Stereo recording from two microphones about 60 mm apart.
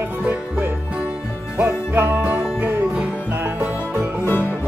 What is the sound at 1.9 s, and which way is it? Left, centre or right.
Music, right.